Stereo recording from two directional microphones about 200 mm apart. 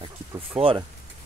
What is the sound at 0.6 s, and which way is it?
Speech, 25° right (ahead or behind).